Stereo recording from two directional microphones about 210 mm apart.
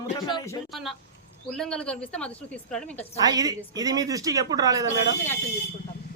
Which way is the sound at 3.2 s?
15° right (ahead or behind).